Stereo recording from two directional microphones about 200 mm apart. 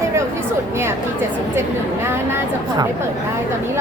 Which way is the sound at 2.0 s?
10° right (ahead or behind).